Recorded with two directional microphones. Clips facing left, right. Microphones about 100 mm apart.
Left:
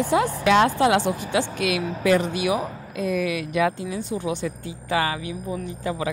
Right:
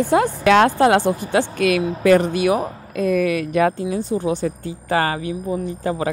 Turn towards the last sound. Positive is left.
turn(degrees=-40)  # may be behind; listen again after turning